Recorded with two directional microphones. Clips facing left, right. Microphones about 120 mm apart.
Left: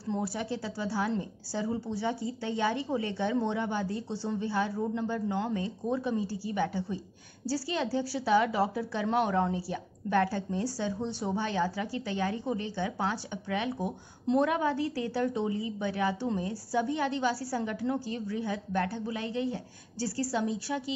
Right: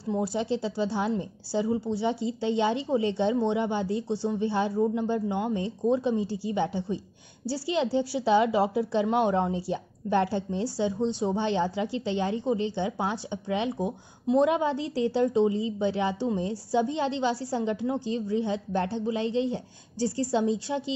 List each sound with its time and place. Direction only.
0.0 s speech: 15° right (ahead or behind)